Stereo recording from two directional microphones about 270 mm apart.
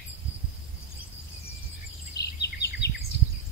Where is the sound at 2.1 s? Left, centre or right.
Left.